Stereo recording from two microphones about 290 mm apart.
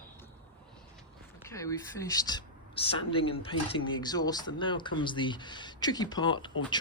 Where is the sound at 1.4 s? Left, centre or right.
Centre.